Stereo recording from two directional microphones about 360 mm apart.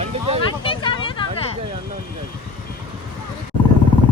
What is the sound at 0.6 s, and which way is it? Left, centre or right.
Vehicle, centre.